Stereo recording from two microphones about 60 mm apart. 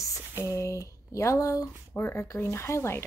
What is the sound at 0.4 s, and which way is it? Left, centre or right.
Speech, left.